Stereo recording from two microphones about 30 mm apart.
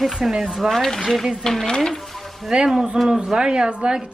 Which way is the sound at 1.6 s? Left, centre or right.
Left.